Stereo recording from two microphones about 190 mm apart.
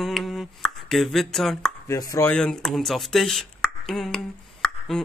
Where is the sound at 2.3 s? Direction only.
5° left (ahead or behind).